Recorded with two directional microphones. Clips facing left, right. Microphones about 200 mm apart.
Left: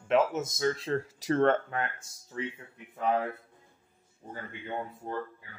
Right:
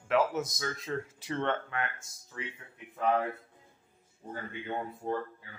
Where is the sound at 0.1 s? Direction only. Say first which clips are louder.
Left 2 dB; 25° left (ahead or behind).